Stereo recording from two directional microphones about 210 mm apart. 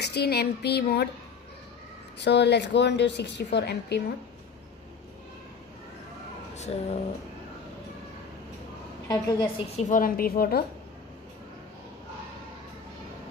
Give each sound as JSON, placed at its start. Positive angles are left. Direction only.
{"t": 0.0, "sound": "a sound", "side_deg": 50}
{"t": 2.1, "sound": "a woman's voice", "side_deg": 55}
{"t": 6.7, "sound": "a woman's voice", "side_deg": 30}
{"t": 9.0, "sound": "a woman's voice", "side_deg": 15}
{"t": 9.7, "sound": "a woman's voice", "side_deg": 35}